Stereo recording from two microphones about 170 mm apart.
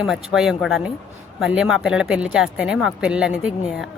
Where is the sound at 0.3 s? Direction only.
Centre (ahead or behind).